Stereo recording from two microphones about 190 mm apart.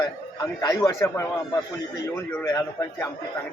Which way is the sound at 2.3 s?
15° left (ahead or behind).